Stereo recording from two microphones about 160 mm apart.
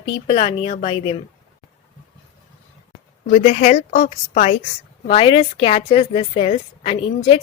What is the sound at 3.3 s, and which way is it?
Speech, 50° left (ahead or behind).